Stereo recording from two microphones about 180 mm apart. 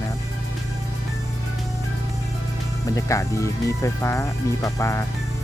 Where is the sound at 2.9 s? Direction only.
15° left (ahead or behind).